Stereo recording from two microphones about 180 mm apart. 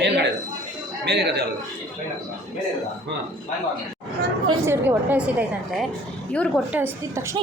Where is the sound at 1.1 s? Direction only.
65° right (ahead or behind).